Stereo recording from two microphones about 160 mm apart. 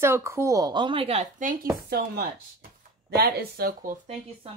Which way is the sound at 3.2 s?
80° right.